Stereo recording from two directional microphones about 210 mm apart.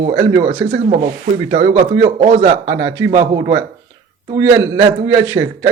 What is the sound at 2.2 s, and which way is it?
Speech, 30° right (ahead or behind).